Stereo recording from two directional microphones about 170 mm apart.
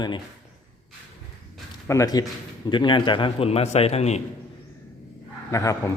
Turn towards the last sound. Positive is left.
turn(degrees=20)  # may be behind; listen again after turning